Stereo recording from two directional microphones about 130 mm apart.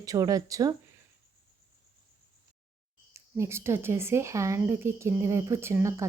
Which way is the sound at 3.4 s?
20° right (ahead or behind).